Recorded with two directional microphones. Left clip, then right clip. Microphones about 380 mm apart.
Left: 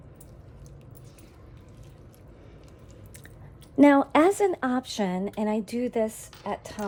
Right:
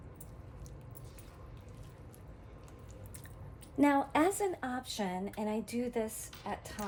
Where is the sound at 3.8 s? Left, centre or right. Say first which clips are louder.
Left 10 dB; left.